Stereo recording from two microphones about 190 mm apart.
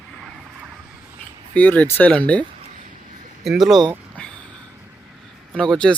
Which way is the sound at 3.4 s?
Centre (ahead or behind).